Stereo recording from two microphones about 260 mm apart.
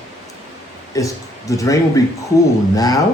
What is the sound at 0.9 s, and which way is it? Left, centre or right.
Speech, centre.